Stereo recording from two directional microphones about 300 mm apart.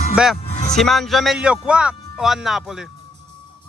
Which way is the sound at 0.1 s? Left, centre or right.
Centre.